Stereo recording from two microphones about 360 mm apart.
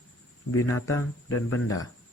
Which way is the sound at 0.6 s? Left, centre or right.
Centre.